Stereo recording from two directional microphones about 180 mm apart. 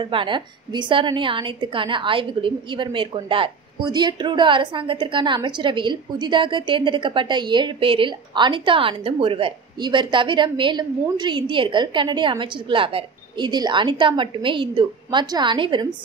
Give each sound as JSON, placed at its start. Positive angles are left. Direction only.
{"t": 0.0, "sound": "a woman's voice", "side_deg": -25}